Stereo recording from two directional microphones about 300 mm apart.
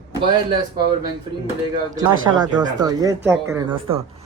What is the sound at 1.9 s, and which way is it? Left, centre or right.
A woman's voice, centre.